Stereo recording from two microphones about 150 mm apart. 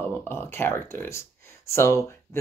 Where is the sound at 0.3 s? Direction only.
15° left (ahead or behind).